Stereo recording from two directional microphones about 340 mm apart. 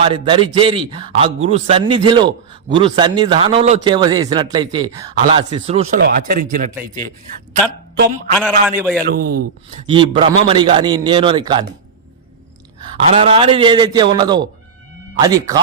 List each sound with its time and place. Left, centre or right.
0.0 s speech: centre
8.4 s a man's voice: centre
9.1 s speech: right
9.8 s speech: centre
13.1 s speech: centre